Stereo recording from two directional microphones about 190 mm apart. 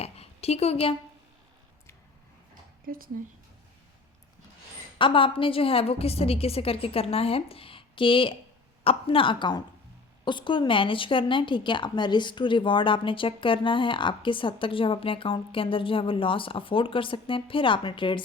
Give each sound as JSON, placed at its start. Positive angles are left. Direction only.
{"t": 0.0, "sound": "a sound", "side_deg": 35}
{"t": 2.8, "sound": "speech", "side_deg": -50}
{"t": 4.9, "sound": "a woman's voice", "side_deg": 25}